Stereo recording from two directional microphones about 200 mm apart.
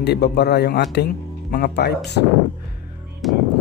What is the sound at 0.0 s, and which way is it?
Speech, 55° left (ahead or behind).